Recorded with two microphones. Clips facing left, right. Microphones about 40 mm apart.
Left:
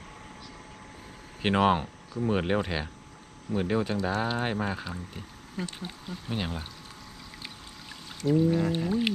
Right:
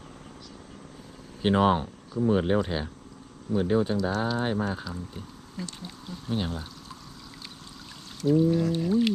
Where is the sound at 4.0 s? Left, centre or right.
Left.